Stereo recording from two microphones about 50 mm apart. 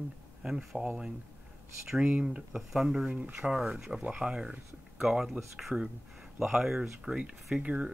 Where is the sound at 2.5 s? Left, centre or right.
Centre.